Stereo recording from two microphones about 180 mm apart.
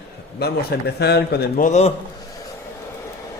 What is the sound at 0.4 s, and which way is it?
A man's voice, 60° left (ahead or behind).